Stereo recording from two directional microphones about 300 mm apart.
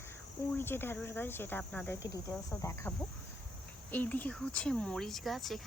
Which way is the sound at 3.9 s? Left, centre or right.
Centre.